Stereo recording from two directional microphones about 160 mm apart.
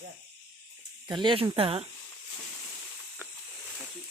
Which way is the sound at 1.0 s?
30° right (ahead or behind).